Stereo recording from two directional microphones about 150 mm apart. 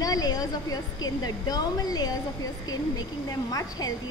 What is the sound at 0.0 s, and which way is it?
A woman's voice, 25° left (ahead or behind).